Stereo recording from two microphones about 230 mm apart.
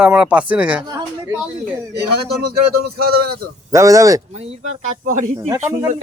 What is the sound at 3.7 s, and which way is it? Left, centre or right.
Speech, centre.